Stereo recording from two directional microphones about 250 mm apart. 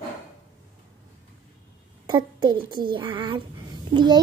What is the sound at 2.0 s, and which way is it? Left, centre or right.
A child's voice, centre.